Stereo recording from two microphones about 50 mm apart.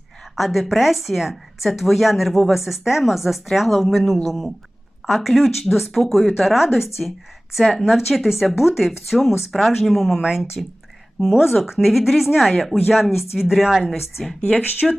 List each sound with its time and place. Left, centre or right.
0.3 s speech: centre
11.4 s speech: centre
14.4 s speech: left